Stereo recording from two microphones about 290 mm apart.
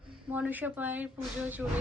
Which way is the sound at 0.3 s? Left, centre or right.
Centre.